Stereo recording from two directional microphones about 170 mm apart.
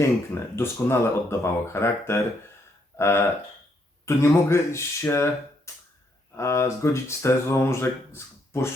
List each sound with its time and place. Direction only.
0.5 s speech: 15° left (ahead or behind)